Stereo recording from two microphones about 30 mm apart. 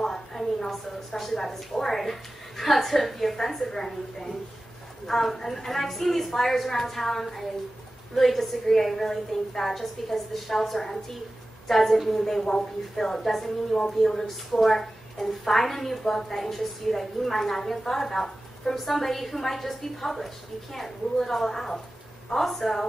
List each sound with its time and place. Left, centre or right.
0.0 s a woman's voice: centre